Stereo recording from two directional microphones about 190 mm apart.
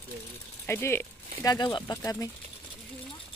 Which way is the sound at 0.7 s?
15° left (ahead or behind).